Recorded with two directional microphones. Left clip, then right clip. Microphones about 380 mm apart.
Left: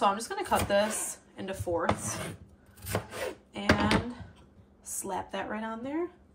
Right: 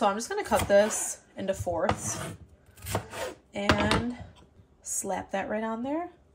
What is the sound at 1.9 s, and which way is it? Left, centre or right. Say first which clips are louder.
Speech: right 1 dB; centre.